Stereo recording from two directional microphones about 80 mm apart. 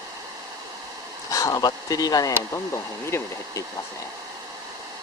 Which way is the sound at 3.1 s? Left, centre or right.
Left.